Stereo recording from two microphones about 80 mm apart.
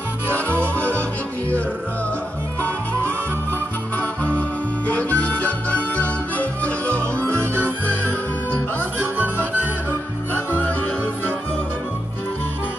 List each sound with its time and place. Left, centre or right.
0.5 s music: centre
4.2 s music: centre
9.2 s music: right